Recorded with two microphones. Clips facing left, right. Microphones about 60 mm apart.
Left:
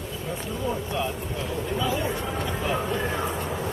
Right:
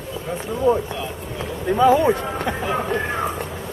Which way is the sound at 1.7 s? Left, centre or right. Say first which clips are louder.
Right 14 dB; right.